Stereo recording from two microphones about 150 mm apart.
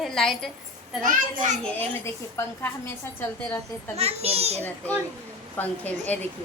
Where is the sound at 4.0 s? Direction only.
45° right (ahead or behind).